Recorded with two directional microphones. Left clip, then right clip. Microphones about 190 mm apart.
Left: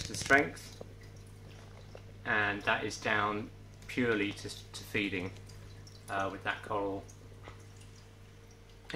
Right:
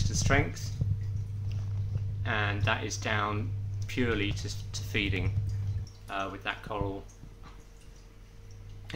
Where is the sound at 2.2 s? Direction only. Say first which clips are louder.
Even; 30° right (ahead or behind).